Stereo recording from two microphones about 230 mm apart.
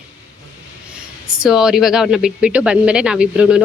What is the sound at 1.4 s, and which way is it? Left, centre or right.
Speech, centre.